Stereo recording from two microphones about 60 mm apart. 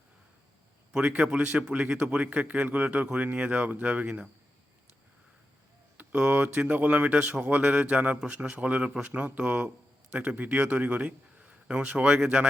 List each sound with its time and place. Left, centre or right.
0.9 s a man's voice: centre
6.0 s a man's voice: right